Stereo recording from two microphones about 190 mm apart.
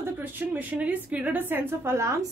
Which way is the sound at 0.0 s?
10° right (ahead or behind).